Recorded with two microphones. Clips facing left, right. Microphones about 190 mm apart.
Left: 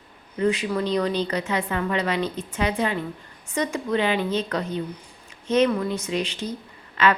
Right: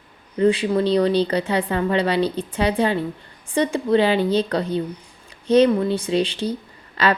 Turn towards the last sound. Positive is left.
turn(degrees=-35)  # may be behind; listen again after turning